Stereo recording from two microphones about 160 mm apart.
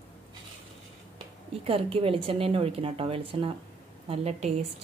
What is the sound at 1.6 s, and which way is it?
A woman's voice, 35° right (ahead or behind).